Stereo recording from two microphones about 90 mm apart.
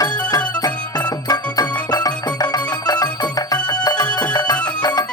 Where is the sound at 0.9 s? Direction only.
45° left (ahead or behind).